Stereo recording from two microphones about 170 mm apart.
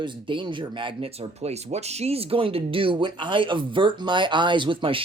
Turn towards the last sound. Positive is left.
turn(degrees=-30)  # may be behind; listen again after turning